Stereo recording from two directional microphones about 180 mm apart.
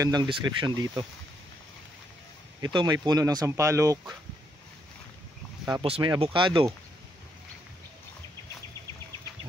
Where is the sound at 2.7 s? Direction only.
20° right (ahead or behind).